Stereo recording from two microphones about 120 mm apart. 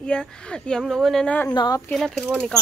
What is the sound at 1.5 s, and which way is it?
Speech, 35° left (ahead or behind).